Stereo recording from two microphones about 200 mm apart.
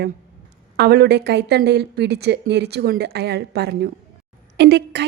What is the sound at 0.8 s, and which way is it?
A woman's voice, 55° right (ahead or behind).